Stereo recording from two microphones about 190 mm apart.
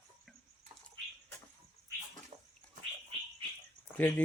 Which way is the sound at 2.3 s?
20° right (ahead or behind).